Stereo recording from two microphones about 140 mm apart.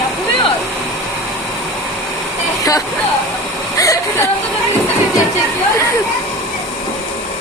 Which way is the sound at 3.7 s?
25° left (ahead or behind).